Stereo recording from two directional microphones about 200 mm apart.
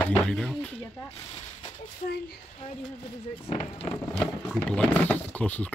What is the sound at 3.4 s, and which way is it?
Speech, 30° left (ahead or behind).